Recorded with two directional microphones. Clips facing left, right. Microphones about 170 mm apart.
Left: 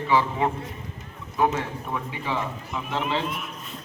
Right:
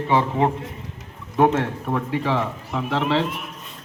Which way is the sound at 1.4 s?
65° right (ahead or behind).